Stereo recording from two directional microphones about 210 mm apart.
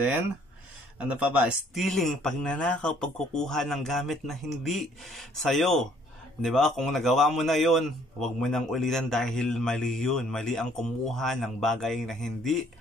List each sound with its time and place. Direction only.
0.9 s a man's voice: 5° right (ahead or behind)